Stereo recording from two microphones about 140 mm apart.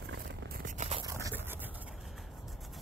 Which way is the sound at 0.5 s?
75° right (ahead or behind).